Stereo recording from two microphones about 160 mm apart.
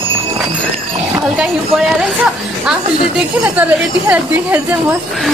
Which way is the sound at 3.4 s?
10° right (ahead or behind).